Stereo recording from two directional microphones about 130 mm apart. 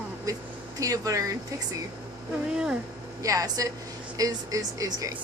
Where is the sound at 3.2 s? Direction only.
25° right (ahead or behind).